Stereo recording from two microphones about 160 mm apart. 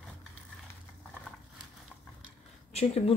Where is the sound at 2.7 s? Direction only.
40° left (ahead or behind).